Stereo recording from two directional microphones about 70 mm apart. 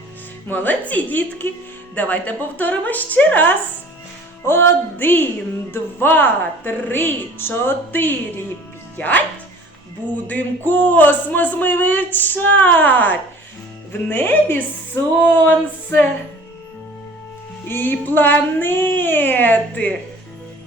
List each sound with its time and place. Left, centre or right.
0.4 s a man's voice: left
10.2 s a man's voice: left
17.7 s a man's voice: left